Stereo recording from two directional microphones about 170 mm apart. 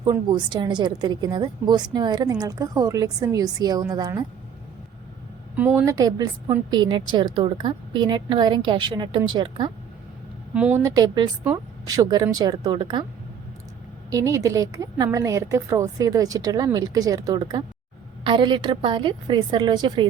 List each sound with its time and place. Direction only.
0.0 s a woman's voice: 25° right (ahead or behind)
5.5 s a woman's voice: 10° right (ahead or behind); by 9.7 s 25° right (ahead or behind)
10.8 s a woman's voice: 20° right (ahead or behind)
14.1 s a woman's voice: 20° right (ahead or behind)